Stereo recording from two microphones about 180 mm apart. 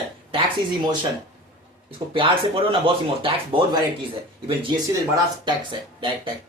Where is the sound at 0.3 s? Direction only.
30° right (ahead or behind).